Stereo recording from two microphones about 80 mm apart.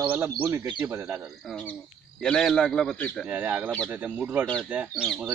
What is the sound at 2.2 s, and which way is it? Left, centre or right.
Speech, centre.